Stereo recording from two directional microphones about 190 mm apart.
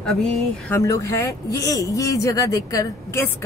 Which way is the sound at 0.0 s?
5° left (ahead or behind).